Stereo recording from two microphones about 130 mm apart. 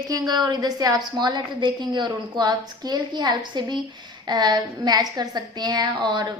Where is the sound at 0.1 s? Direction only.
35° right (ahead or behind).